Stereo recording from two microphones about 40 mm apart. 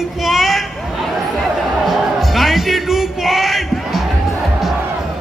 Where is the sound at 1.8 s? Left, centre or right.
Centre.